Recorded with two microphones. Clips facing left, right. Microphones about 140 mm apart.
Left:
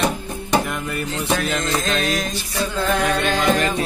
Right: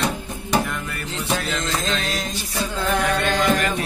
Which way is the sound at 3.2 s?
20° left (ahead or behind).